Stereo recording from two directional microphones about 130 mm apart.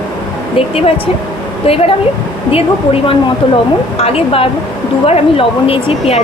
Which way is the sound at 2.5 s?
45° left (ahead or behind).